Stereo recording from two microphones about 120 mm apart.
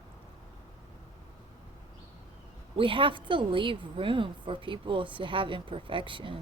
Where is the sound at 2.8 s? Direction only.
45° right (ahead or behind).